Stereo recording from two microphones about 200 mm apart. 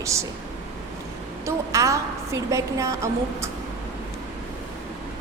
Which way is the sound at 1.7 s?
15° right (ahead or behind).